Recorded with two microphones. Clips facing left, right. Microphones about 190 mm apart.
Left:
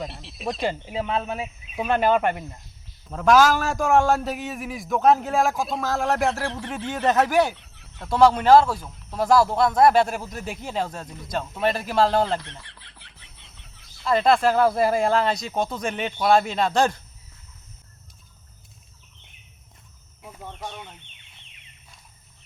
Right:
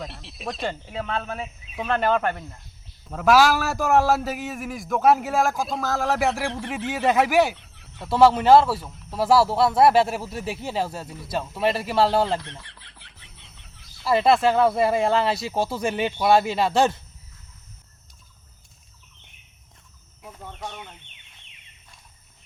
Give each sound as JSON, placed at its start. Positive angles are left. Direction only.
{"t": 0.0, "sound": "a man's voice", "side_deg": 0}
{"t": 3.1, "sound": "a man's voice", "side_deg": -5}
{"t": 20.4, "sound": "a man's voice", "side_deg": 5}